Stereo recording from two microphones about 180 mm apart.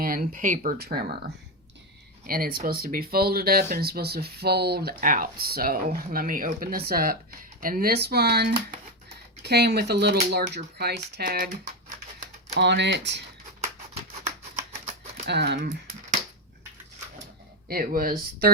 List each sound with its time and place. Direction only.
0.0 s speech: 55° right (ahead or behind)
2.2 s speech: 55° right (ahead or behind)
12.5 s speech: 70° right (ahead or behind)
15.3 s speech: 70° right (ahead or behind)
17.7 s speech: 55° right (ahead or behind)